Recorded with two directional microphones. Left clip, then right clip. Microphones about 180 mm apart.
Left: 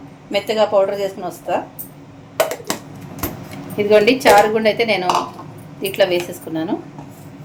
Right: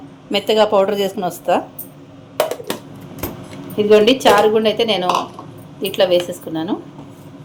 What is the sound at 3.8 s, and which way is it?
A woman's voice, 15° right (ahead or behind).